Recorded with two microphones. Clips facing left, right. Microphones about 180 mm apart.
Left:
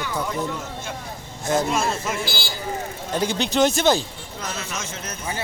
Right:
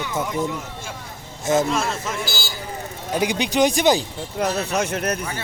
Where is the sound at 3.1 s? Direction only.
15° right (ahead or behind).